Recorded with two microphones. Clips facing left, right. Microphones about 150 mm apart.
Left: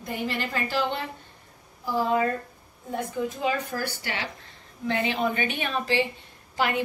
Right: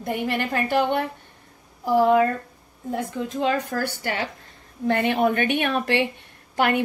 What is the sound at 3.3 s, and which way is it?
Speech, 65° right (ahead or behind).